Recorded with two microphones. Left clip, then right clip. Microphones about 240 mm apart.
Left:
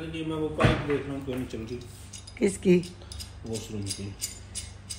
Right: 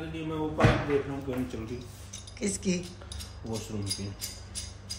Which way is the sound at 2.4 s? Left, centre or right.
Left.